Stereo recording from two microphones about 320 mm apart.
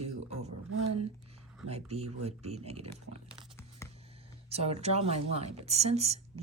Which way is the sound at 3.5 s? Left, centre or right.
Centre.